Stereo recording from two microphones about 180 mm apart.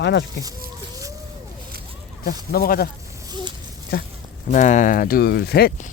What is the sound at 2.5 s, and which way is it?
Speech, 55° left (ahead or behind).